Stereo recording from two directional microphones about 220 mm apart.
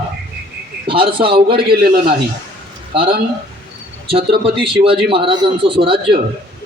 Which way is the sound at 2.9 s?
25° right (ahead or behind).